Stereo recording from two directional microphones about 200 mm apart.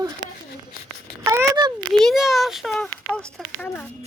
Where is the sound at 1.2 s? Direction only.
15° right (ahead or behind).